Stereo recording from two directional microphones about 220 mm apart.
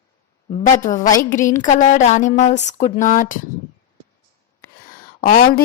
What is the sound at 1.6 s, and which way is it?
A woman's voice, 35° left (ahead or behind).